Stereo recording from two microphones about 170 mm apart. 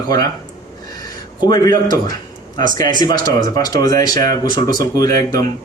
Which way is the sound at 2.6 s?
50° right (ahead or behind).